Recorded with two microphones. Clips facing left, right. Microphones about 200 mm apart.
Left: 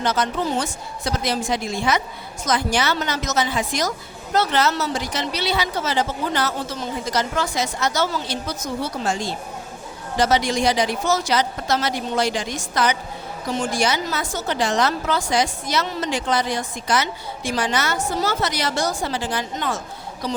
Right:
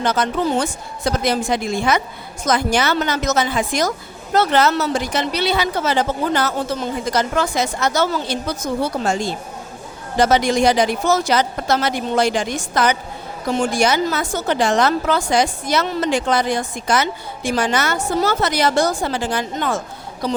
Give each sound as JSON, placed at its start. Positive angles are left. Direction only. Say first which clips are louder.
{"t": 0.0, "sound": "speech", "louder": "right 3 dB", "side_deg": -55}